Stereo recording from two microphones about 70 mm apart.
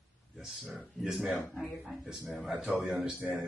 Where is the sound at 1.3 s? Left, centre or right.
Left.